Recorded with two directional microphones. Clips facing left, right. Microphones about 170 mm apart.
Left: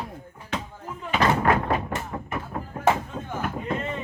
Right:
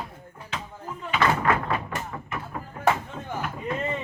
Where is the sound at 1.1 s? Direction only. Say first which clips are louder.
Left 2 dB; 35° left (ahead or behind).